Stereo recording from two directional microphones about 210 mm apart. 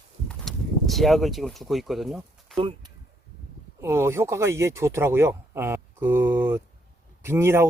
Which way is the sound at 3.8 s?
10° right (ahead or behind).